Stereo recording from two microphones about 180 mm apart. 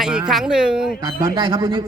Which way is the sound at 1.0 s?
25° right (ahead or behind).